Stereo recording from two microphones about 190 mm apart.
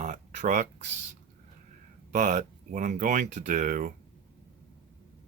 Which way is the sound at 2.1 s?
40° right (ahead or behind).